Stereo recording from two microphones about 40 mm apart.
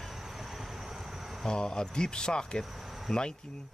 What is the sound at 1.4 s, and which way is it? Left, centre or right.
Speech, centre.